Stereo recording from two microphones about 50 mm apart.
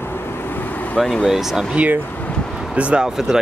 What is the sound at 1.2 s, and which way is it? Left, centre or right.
Speech, centre.